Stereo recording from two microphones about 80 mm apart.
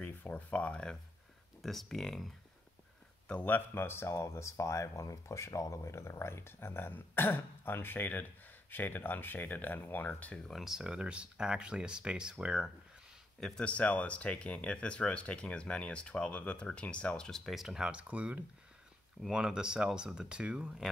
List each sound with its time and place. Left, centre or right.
0.0 s speech: left
1.6 s speech: centre
3.3 s speech: centre
10.5 s speech: centre
13.4 s speech: centre